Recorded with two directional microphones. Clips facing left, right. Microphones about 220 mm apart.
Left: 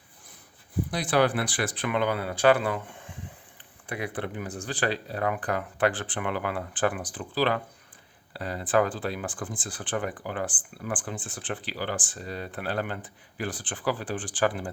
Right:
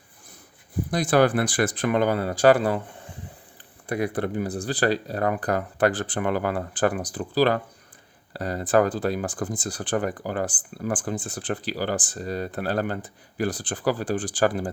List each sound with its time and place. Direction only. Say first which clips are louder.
0.9 s speech: right 5 dB; 45° right (ahead or behind)